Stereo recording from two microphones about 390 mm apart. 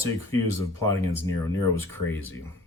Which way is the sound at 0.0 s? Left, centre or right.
Centre.